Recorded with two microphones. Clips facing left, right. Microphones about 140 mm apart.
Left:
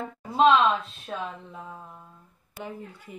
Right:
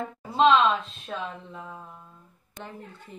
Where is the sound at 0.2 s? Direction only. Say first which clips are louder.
Even; centre (ahead or behind).